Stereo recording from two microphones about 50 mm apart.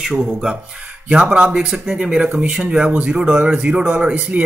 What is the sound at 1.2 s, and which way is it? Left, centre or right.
Speech, right.